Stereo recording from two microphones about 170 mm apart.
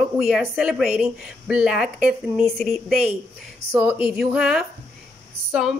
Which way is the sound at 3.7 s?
15° right (ahead or behind).